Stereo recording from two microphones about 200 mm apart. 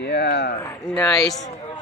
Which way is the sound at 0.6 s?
10° left (ahead or behind).